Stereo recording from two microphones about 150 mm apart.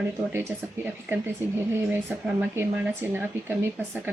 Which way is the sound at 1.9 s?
15° right (ahead or behind).